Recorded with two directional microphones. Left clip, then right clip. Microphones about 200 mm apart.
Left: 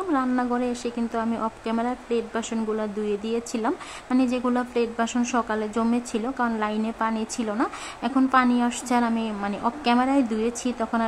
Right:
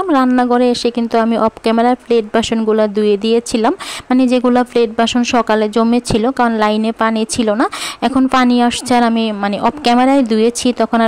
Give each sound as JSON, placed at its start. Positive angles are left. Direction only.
{"t": 0.3, "sound": "speech", "side_deg": -40}